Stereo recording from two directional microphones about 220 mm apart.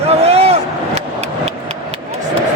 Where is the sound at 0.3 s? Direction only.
30° right (ahead or behind).